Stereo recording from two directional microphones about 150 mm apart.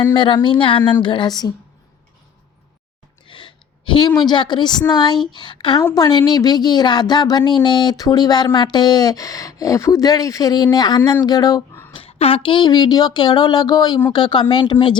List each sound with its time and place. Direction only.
0.1 s speech: 35° left (ahead or behind)
3.2 s a woman's voice: 35° left (ahead or behind)
11.9 s a woman's voice: 40° left (ahead or behind)